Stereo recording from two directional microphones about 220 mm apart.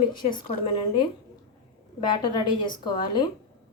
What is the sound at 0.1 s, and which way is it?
A woman's voice, 20° left (ahead or behind).